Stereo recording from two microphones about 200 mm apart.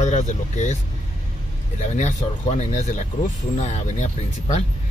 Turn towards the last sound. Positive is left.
turn(degrees=35)  # may be behind; listen again after turning